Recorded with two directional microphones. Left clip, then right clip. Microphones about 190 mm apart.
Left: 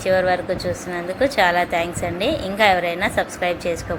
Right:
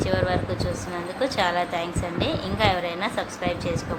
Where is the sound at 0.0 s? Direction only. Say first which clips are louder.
Left 6 dB; 20° left (ahead or behind).